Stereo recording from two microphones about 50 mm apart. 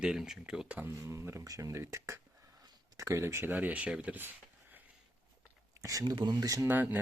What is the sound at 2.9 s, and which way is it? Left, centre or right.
Speech, right.